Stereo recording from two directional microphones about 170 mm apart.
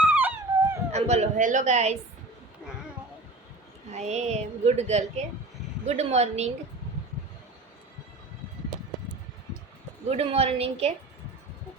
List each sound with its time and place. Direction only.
0.1 s dog: 10° right (ahead or behind)
0.9 s a woman's voice: 40° right (ahead or behind)
3.9 s speech: 40° right (ahead or behind)
10.1 s speech: 35° right (ahead or behind)